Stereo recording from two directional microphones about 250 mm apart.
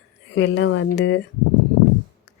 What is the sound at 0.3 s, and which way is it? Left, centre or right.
Speech, left.